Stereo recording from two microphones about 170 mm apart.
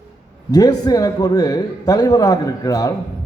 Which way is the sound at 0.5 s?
20° left (ahead or behind).